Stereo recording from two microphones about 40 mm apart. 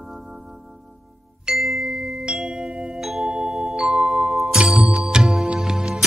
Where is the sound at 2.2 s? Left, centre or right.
Centre.